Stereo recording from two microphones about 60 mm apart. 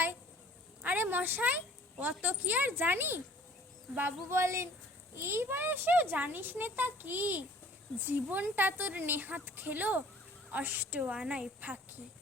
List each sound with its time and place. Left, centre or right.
0.8 s a woman's voice: right
4.4 s a child's voice: right
11.1 s a woman's voice: centre